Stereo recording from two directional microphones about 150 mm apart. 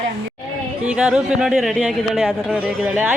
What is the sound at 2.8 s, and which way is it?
Speech, 10° right (ahead or behind).